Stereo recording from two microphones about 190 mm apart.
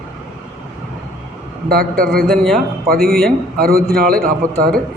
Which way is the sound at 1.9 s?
50° right (ahead or behind).